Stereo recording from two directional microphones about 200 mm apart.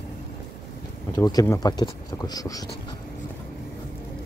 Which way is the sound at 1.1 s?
20° left (ahead or behind).